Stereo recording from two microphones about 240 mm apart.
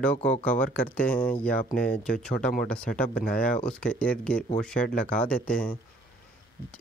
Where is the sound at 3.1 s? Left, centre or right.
Left.